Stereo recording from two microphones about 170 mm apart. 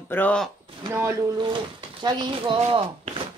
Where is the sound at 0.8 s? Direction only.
20° right (ahead or behind); by 2.8 s 35° right (ahead or behind).